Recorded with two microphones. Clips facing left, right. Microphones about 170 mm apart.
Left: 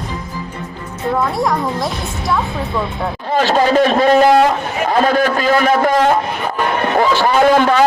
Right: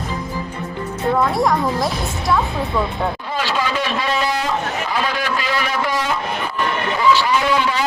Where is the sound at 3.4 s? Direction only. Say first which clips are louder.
Left 11 dB; 45° left (ahead or behind).